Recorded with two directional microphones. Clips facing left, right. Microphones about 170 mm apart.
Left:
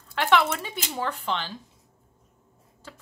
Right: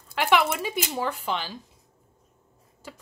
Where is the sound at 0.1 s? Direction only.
10° right (ahead or behind).